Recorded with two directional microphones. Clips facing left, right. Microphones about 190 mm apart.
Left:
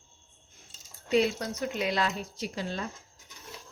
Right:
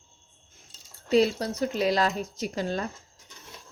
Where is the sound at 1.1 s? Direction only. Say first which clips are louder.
Right 4 dB; 35° right (ahead or behind).